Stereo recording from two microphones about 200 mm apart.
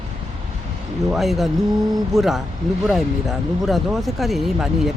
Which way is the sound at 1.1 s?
Centre (ahead or behind).